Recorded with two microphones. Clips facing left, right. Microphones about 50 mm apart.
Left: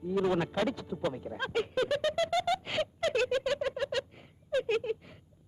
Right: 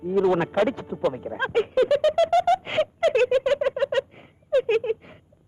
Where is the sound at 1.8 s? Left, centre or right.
Centre.